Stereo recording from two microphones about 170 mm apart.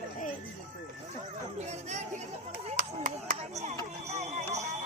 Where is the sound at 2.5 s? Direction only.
55° right (ahead or behind).